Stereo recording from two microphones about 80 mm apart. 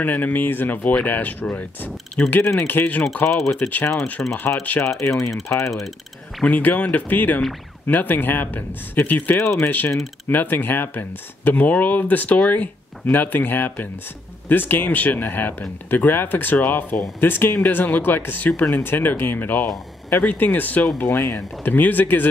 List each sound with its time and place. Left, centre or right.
0.0 s speech: left
4.4 s speech: left
5.1 s speech: centre
6.4 s speech: left